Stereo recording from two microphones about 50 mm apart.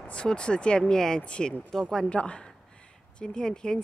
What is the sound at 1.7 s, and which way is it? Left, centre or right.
Speech, centre.